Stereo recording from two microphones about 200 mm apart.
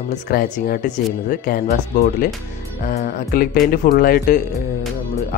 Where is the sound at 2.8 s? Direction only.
45° left (ahead or behind).